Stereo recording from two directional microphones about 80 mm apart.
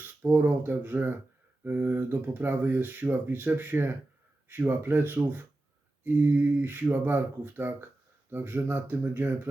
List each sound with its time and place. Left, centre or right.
0.0 s speech: right